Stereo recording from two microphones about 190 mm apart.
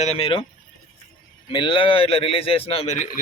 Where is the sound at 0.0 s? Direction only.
30° left (ahead or behind).